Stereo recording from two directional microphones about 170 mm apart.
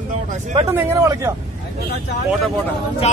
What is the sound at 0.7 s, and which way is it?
Speech, 15° right (ahead or behind).